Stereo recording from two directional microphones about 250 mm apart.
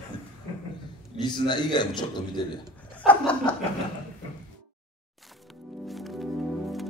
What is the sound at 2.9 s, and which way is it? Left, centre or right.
Speech, centre.